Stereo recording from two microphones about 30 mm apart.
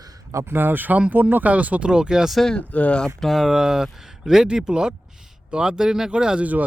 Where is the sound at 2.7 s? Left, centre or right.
Left.